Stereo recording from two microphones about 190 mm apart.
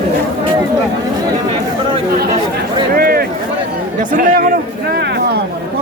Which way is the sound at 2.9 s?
50° right (ahead or behind).